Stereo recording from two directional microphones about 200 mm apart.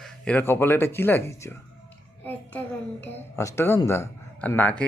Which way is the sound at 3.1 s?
15° left (ahead or behind).